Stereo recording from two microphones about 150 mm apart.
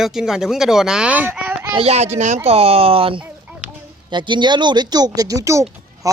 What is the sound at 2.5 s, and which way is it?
Speech, 40° right (ahead or behind).